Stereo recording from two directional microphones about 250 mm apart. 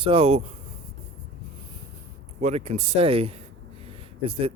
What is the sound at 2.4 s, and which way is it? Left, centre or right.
Speech, right.